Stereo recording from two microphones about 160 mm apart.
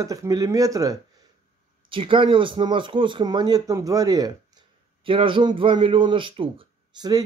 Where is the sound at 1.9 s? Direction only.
30° right (ahead or behind).